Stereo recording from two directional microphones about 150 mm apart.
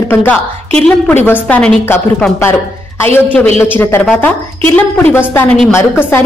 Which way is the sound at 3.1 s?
10° left (ahead or behind).